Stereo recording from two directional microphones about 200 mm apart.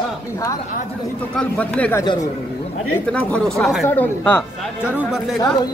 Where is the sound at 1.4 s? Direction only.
5° left (ahead or behind).